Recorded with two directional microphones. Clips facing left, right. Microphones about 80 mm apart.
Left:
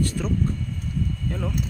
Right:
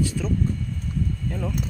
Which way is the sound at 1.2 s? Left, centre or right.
Centre.